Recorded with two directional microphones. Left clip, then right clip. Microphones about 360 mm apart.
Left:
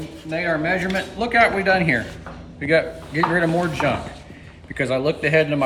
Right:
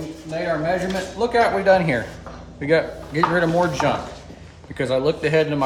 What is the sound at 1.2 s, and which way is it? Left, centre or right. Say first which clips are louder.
A man's voice: even; centre.